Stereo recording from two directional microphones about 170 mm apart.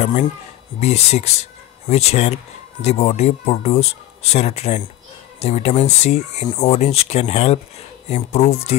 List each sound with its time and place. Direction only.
0.7 s speech: 40° left (ahead or behind)